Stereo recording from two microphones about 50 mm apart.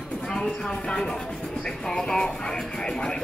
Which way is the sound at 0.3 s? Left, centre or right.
Centre.